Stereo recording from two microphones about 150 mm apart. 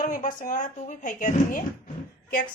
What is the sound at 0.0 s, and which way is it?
A woman's voice, 60° left (ahead or behind).